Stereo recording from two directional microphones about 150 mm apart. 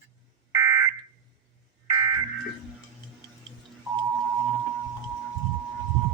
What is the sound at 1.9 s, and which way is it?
Fire alarm, 25° right (ahead or behind).